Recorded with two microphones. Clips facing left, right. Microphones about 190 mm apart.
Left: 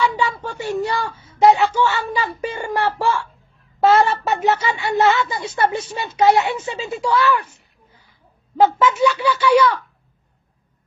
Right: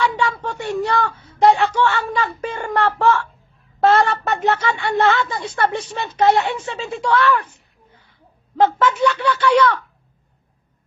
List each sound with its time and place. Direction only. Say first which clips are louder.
0.1 s speech: right 1 dB; centre (ahead or behind)
1.1 s a sound: right 2 dB; 65° right (ahead or behind)
1.8 s a woman's voice: right 1 dB; 10° left (ahead or behind)
8.5 s a woman's voice: left 1 dB; 10° left (ahead or behind)